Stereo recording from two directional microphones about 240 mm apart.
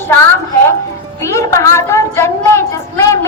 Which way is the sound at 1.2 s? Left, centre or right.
Centre.